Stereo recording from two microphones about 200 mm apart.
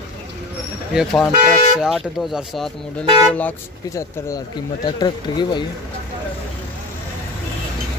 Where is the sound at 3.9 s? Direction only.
15° left (ahead or behind).